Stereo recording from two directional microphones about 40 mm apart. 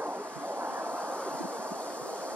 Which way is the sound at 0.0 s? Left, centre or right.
Right.